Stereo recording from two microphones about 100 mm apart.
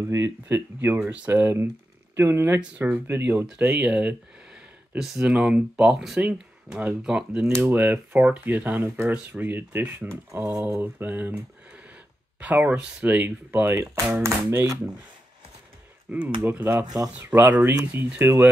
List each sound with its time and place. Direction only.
0.0 s speech: 30° right (ahead or behind)
4.9 s speech: 5° right (ahead or behind); by 10.4 s 25° right (ahead or behind)
10.4 s speech: 5° right (ahead or behind)
10.7 s speech: 20° right (ahead or behind)
16.1 s speech: 15° right (ahead or behind)
16.8 s speech: 40° right (ahead or behind)
17.2 s speech: 20° right (ahead or behind)